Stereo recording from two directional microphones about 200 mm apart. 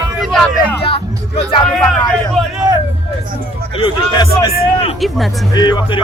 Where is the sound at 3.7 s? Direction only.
25° left (ahead or behind).